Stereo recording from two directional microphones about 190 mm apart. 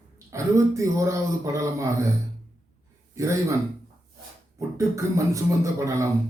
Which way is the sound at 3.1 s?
15° right (ahead or behind).